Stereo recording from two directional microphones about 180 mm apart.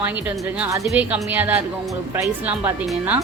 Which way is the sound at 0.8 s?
5° right (ahead or behind).